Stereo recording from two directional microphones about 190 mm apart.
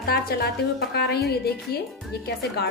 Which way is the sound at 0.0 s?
55° left (ahead or behind).